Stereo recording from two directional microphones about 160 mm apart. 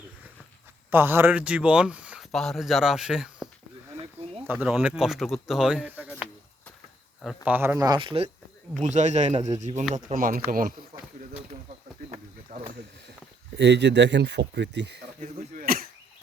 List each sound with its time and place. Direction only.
0.9 s speech: 15° right (ahead or behind)
7.4 s speech: 10° right (ahead or behind)
7.9 s speech: 35° right (ahead or behind)
8.8 s speech: 50° right (ahead or behind)
12.1 s a sound: 45° right (ahead or behind)
13.6 s speech: 90° right
15.2 s a sound: 60° right (ahead or behind)